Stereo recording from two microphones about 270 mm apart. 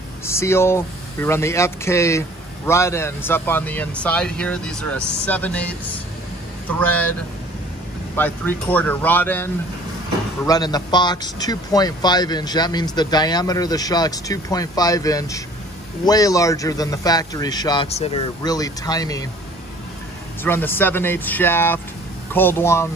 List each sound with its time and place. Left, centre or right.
0.2 s speech: centre
8.2 s speech: centre
20.4 s speech: centre